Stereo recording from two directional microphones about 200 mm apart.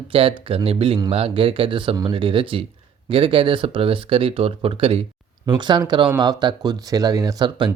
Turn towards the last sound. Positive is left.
turn(degrees=-25)  # may be behind; listen again after turning